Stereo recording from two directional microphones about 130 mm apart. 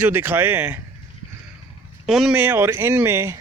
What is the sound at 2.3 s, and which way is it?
Speech, 15° right (ahead or behind).